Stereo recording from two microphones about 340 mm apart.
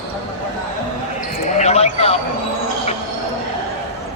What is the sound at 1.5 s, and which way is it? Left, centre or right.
Basketball bounce, centre.